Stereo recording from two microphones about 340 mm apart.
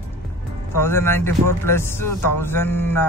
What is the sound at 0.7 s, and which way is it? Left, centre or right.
Speech, centre.